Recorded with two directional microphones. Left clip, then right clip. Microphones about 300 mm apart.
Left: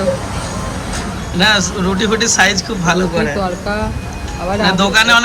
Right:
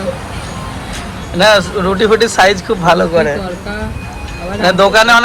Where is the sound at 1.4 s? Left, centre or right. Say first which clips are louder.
Right 4 dB; centre.